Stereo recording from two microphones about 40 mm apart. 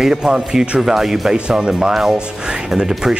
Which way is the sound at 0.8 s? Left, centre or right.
Centre.